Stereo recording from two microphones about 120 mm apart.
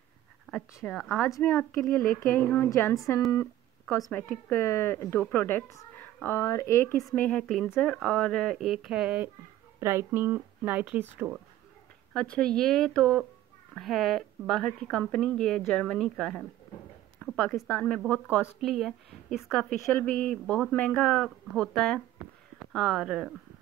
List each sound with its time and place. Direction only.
0.5 s speech: centre (ahead or behind)
1.2 s a woman's voice: 20° left (ahead or behind)
2.7 s a woman's voice: 25° left (ahead or behind)
7.2 s speech: 10° left (ahead or behind)
9.8 s speech: 20° right (ahead or behind)
12.1 s speech: 5° left (ahead or behind)
17.2 s a sound: 15° left (ahead or behind)
17.6 s speech: 15° left (ahead or behind)
18.6 s speech: centre (ahead or behind)